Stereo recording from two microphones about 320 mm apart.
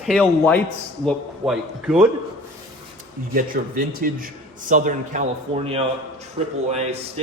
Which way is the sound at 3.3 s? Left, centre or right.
Right.